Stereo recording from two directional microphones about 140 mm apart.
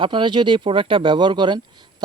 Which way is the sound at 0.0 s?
35° right (ahead or behind).